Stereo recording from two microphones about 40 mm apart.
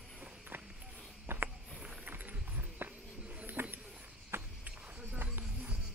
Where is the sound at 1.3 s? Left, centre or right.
Right.